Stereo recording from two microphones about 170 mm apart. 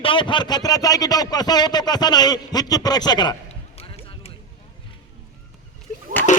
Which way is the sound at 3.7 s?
35° left (ahead or behind).